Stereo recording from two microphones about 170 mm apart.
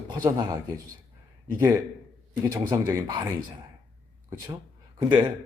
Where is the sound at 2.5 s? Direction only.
15° right (ahead or behind).